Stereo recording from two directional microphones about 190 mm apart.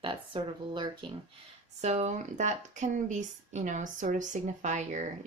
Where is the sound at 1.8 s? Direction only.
35° right (ahead or behind).